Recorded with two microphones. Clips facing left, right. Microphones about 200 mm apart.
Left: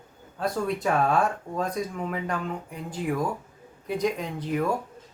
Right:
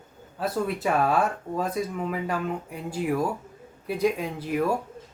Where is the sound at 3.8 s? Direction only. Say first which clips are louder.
Right 2 dB; 5° right (ahead or behind).